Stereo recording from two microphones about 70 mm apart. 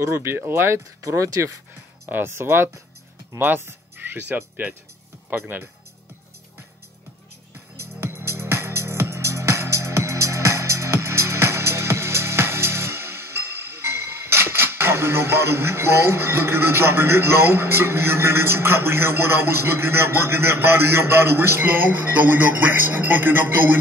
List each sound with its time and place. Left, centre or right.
0.0 s speech: right
8.0 s music: right